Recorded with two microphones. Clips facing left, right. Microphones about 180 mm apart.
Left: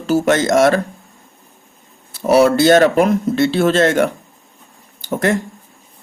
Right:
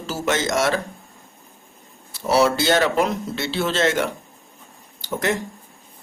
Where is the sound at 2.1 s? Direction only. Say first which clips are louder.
Left 6 dB; 55° left (ahead or behind).